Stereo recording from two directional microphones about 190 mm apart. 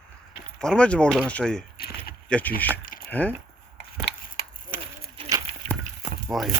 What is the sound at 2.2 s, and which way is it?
Speech, 5° left (ahead or behind).